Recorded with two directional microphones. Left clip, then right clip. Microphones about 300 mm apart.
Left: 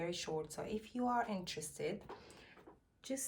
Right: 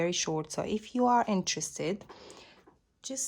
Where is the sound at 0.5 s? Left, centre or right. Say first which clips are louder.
Right 11 dB; centre.